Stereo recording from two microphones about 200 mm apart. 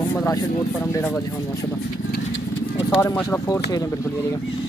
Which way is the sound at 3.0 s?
15° left (ahead or behind).